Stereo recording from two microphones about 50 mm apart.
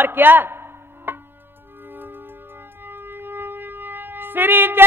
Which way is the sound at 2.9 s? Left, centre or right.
Right.